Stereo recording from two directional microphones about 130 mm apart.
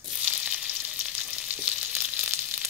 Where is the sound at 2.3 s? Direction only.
15° right (ahead or behind).